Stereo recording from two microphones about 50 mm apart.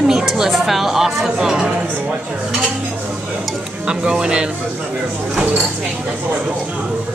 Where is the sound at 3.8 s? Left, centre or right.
Centre.